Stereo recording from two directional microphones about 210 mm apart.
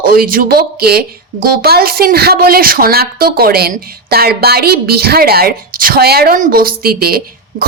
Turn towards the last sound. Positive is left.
turn(degrees=-45)  # may be behind; listen again after turning